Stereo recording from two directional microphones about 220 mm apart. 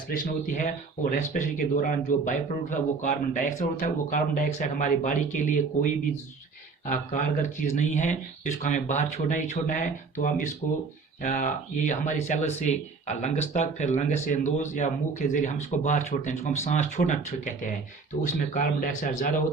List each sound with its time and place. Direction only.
0.1 s speech: 35° left (ahead or behind)